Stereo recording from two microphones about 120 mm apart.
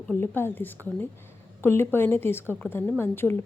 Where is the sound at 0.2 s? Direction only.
20° left (ahead or behind).